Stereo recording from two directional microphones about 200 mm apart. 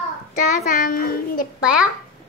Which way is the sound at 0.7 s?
45° left (ahead or behind).